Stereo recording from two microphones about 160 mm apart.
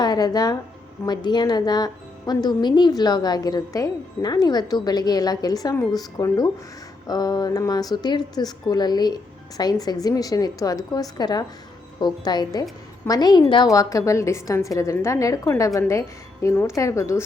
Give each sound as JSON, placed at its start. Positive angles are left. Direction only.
{"t": 0.0, "sound": "a woman's voice", "side_deg": 25}